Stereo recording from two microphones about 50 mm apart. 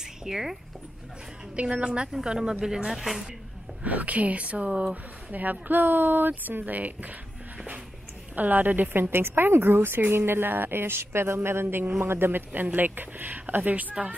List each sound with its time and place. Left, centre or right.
0.2 s speech: centre
1.7 s a woman's voice: centre
3.8 s a woman's voice: right
4.6 s speech: centre
5.3 s speech: right
8.4 s speech: right